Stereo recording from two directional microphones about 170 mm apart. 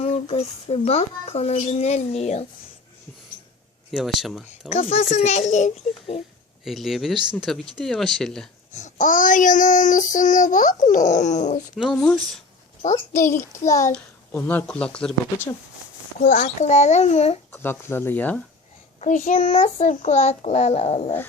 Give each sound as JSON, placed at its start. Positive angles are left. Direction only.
{"t": 0.0, "sound": "speech", "side_deg": 35}
{"t": 3.9, "sound": "speech", "side_deg": 0}
{"t": 4.7, "sound": "speech", "side_deg": 35}
{"t": 5.1, "sound": "child singing", "side_deg": 45}
{"t": 6.7, "sound": "speech", "side_deg": 0}
{"t": 8.7, "sound": "child singing", "side_deg": 45}
{"t": 11.7, "sound": "speech", "side_deg": 0}
{"t": 13.4, "sound": "speech", "side_deg": 20}
{"t": 16.2, "sound": "child singing", "side_deg": 45}
{"t": 17.5, "sound": "speech", "side_deg": 10}
{"t": 18.9, "sound": "speech", "side_deg": 45}